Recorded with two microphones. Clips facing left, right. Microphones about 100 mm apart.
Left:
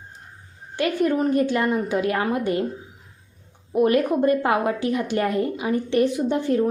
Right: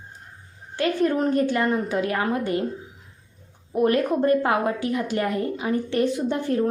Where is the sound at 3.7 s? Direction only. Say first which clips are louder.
Left 2 dB; 15° left (ahead or behind).